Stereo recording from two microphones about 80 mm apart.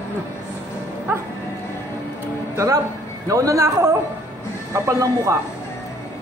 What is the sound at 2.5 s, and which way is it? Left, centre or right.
A man's voice, right.